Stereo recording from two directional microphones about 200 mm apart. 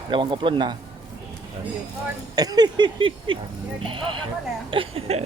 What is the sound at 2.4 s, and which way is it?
Speech, 20° right (ahead or behind).